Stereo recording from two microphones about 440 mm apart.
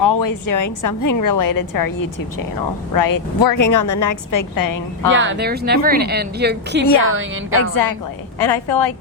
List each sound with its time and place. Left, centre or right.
0.0 s a woman's voice: left
5.1 s speech: right
8.4 s a woman's voice: left